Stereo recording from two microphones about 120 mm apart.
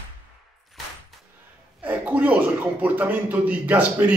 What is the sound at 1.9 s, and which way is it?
A man's voice, 15° right (ahead or behind).